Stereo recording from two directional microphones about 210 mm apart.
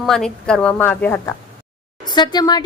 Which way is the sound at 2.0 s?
20° left (ahead or behind).